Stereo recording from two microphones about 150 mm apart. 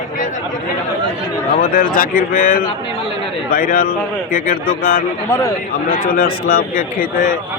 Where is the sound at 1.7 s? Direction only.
70° left (ahead or behind).